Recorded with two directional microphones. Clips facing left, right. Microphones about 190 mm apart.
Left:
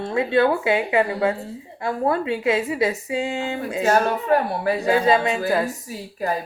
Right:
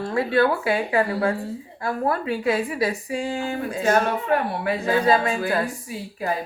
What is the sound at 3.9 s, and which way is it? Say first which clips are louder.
Speech: left 2 dB; 35° left (ahead or behind).